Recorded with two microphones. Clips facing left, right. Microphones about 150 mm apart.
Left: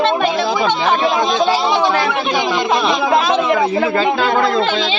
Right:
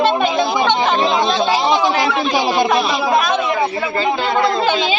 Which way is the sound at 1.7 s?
15° right (ahead or behind).